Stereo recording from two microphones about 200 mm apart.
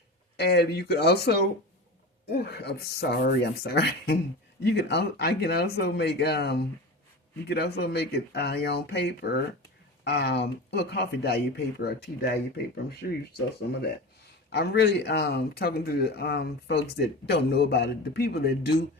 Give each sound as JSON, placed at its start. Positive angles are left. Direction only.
{"t": 0.3, "sound": "speech", "side_deg": 55}
{"t": 2.4, "sound": "speech", "side_deg": 55}
{"t": 14.5, "sound": "speech", "side_deg": 55}